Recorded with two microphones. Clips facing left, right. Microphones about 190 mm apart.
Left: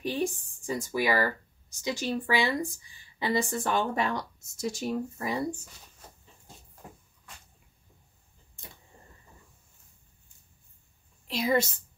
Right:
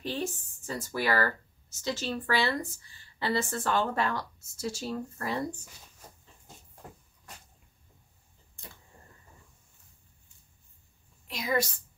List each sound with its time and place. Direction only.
0.0 s speech: 15° left (ahead or behind)
11.2 s a woman's voice: 30° left (ahead or behind)